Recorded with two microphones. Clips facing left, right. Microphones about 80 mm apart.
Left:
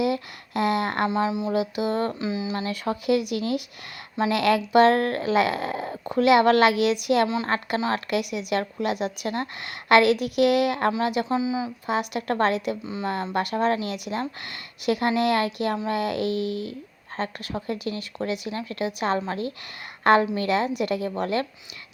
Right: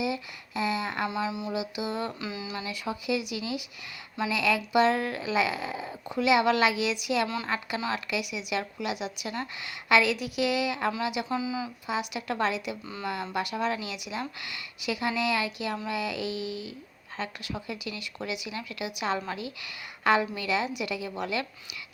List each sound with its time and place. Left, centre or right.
0.0 s speech: left
1.1 s speech: left
1.5 s speech: left
2.2 s speech: left
2.6 s speech: left
11.3 s speech: left
11.9 s speech: left
12.8 s speech: left
13.3 s speech: left